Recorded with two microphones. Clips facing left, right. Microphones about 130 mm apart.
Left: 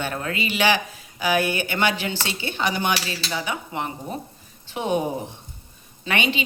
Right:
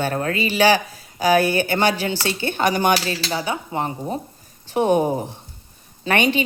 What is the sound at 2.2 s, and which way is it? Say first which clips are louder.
Speech: right 7 dB; 50° right (ahead or behind).